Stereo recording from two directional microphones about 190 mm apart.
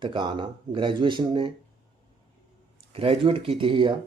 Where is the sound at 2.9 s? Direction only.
30° right (ahead or behind).